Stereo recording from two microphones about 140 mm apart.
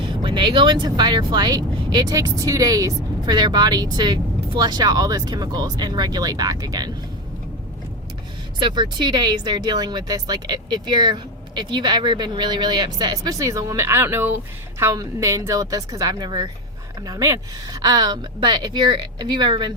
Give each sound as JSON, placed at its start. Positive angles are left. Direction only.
{"t": 0.0, "sound": "speech", "side_deg": -35}
{"t": 8.5, "sound": "speech", "side_deg": -35}